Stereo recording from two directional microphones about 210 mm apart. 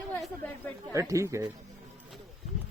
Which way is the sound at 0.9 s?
15° right (ahead or behind).